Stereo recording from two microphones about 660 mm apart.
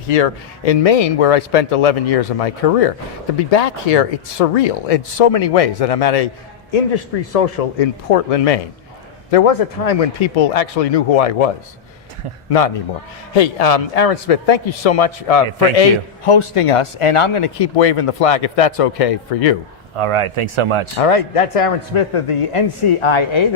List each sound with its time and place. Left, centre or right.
0.1 s a man's voice: left
20.0 s speech: right
20.9 s a man's voice: left